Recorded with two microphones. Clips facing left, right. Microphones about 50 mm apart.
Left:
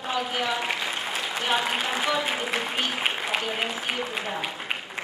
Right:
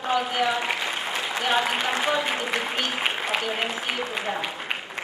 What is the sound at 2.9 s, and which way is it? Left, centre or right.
Applause, centre.